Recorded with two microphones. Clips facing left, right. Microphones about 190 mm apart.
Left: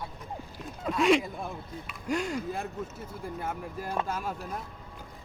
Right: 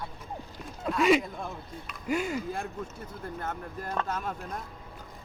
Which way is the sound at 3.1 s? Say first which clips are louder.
Left 1 dB; 10° left (ahead or behind).